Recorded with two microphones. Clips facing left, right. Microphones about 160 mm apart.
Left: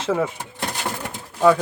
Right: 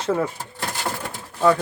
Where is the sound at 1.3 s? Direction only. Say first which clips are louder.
Left 2 dB; 10° left (ahead or behind).